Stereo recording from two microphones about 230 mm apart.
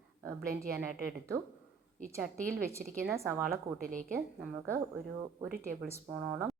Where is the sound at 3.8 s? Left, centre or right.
Right.